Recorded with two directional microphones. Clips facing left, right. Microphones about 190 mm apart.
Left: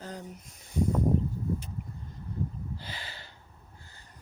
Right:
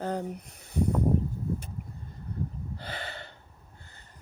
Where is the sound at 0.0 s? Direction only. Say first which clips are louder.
Right 9 dB; 60° right (ahead or behind).